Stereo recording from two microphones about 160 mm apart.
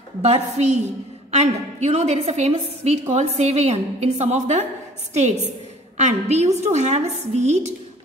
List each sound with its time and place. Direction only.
0.2 s a woman's voice: 45° right (ahead or behind)